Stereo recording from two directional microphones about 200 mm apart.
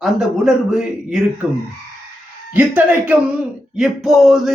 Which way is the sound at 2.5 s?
10° right (ahead or behind).